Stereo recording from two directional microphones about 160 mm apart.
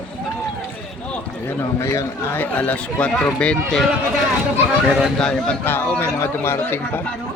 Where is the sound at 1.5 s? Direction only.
15° left (ahead or behind).